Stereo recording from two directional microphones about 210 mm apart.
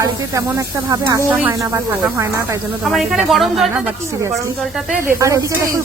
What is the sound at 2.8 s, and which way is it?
Speech, centre (ahead or behind).